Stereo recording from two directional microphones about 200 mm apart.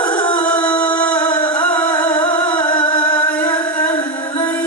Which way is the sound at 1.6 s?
5° left (ahead or behind).